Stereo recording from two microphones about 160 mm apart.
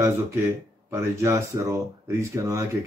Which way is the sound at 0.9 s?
15° right (ahead or behind).